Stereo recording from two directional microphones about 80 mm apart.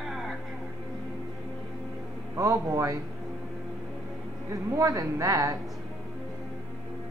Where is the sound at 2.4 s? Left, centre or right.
Right.